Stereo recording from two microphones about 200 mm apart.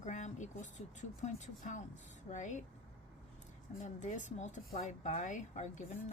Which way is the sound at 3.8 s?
40° left (ahead or behind).